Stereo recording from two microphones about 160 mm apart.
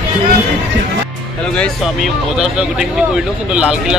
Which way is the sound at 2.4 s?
5° right (ahead or behind).